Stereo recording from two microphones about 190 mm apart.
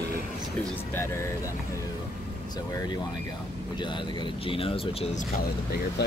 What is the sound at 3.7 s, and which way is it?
Speech, 25° left (ahead or behind).